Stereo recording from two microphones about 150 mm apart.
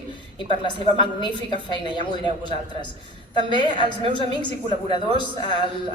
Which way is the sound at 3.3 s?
30° left (ahead or behind).